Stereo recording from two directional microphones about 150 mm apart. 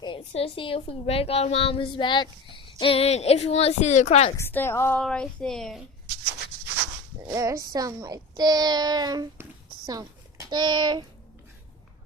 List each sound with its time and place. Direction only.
0.0 s a woman's voice: 35° left (ahead or behind)
4.4 s a woman's voice: 15° left (ahead or behind)
4.9 s a woman's voice: 5° left (ahead or behind)
7.3 s a child's voice: 20° right (ahead or behind)
9.4 s a sound: 25° right (ahead or behind)